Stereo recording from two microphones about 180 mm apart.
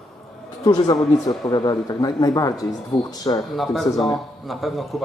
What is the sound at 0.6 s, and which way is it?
Speech, 20° left (ahead or behind).